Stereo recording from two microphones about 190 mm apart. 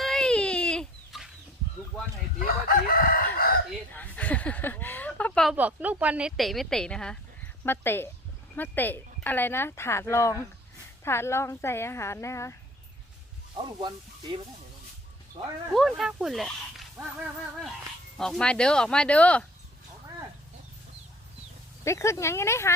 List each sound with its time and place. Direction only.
0.0 s chicken: 5° left (ahead or behind)
2.4 s chicken: 50° left (ahead or behind)
3.9 s a sound: 10° left (ahead or behind)
5.5 s a woman's voice: 10° right (ahead or behind); by 12.5 s 15° left (ahead or behind)
13.6 s speech: 25° right (ahead or behind)
15.7 s speech: centre (ahead or behind)
18.2 s a woman's voice: 5° left (ahead or behind)
21.8 s a woman's voice: 15° left (ahead or behind)